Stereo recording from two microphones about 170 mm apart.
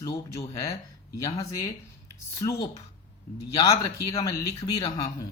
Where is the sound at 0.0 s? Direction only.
20° left (ahead or behind).